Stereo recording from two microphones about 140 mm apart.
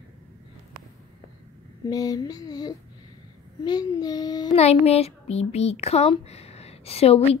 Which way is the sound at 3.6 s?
30° left (ahead or behind).